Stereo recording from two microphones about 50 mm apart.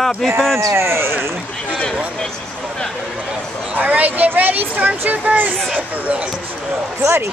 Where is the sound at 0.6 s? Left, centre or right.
Right.